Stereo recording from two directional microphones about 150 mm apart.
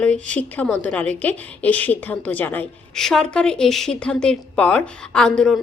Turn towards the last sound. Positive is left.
turn(degrees=0)  # may be behind; listen again after turning